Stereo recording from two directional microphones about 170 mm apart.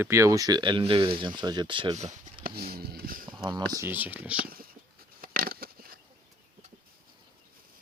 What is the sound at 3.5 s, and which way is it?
Speech, 25° right (ahead or behind).